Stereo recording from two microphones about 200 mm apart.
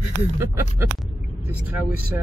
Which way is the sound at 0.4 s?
15° right (ahead or behind).